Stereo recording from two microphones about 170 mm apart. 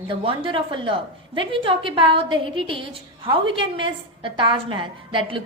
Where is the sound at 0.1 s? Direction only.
30° right (ahead or behind).